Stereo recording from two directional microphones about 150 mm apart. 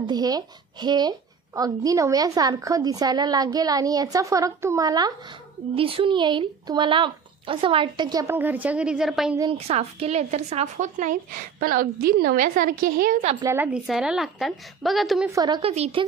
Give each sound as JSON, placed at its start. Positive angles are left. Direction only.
{"t": 0.0, "sound": "speech", "side_deg": -25}
{"t": 5.8, "sound": "speech", "side_deg": -40}
{"t": 8.4, "sound": "a woman's voice", "side_deg": -10}
{"t": 9.5, "sound": "speech", "side_deg": -40}
{"t": 11.6, "sound": "a woman's voice", "side_deg": -70}
{"t": 13.6, "sound": "a woman's voice", "side_deg": -5}
{"t": 15.2, "sound": "speech", "side_deg": -25}
{"t": 15.6, "sound": "speech", "side_deg": -45}